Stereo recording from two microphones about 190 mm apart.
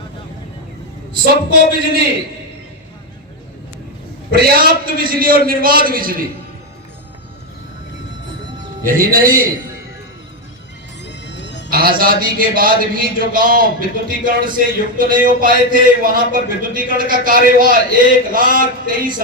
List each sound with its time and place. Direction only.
1.2 s speech: 50° right (ahead or behind)
4.3 s speech: 55° right (ahead or behind)
8.8 s speech: 50° right (ahead or behind)
11.0 s music: 65° left (ahead or behind)
11.7 s speech: 50° right (ahead or behind)